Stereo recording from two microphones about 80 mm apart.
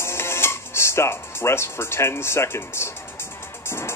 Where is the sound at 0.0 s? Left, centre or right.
Left.